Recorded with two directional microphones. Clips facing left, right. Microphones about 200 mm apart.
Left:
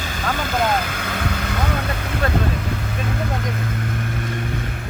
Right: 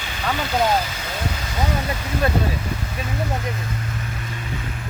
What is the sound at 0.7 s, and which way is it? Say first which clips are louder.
Vehicle: even; 55° left (ahead or behind).